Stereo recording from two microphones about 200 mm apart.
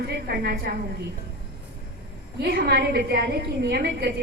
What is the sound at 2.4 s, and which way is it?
A woman's voice, 50° right (ahead or behind).